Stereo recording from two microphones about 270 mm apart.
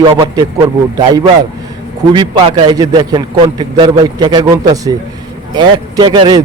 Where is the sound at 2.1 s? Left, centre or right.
Centre.